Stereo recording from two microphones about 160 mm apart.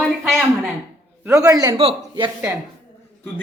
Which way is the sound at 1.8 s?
35° right (ahead or behind).